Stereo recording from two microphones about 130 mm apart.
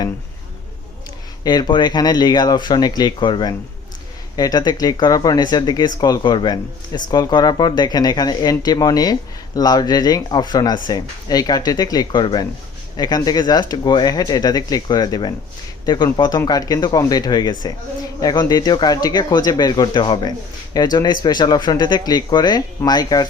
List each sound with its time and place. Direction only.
1.5 s speech: 35° left (ahead or behind)